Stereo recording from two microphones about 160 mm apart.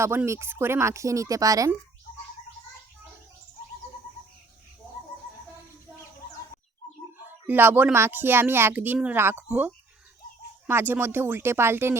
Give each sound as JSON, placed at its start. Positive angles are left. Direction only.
{"t": 0.0, "sound": "speech", "side_deg": -15}
{"t": 7.2, "sound": "speech", "side_deg": -10}